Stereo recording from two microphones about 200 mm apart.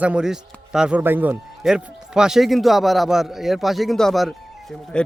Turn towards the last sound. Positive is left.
turn(degrees=0)  # may be behind; listen again after turning